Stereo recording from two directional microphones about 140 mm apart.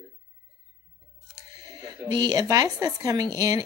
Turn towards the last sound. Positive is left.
turn(degrees=-25)  # may be behind; listen again after turning